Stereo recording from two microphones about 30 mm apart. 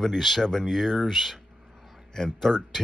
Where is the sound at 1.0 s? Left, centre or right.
Centre.